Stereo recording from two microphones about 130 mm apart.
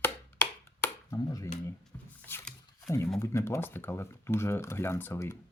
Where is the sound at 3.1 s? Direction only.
20° left (ahead or behind).